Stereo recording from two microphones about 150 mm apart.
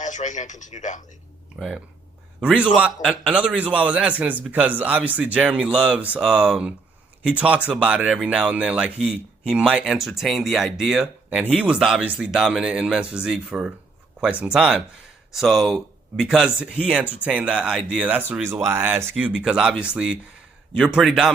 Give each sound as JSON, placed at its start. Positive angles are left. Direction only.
{"t": 0.0, "sound": "speech", "side_deg": 55}
{"t": 1.5, "sound": "a man's voice", "side_deg": 0}